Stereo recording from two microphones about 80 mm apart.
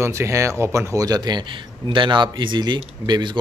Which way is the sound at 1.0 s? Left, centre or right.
Right.